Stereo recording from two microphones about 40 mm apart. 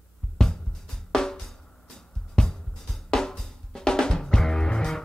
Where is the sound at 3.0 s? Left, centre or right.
Centre.